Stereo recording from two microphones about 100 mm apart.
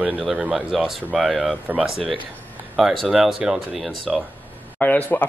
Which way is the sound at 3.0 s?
5° right (ahead or behind).